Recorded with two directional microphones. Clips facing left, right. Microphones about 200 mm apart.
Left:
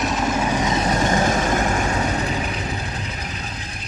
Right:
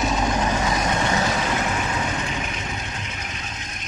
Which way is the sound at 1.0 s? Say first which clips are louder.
Left 4 dB; 45° left (ahead or behind).